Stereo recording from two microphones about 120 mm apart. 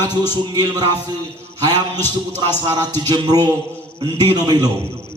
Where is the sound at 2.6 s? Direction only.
35° right (ahead or behind).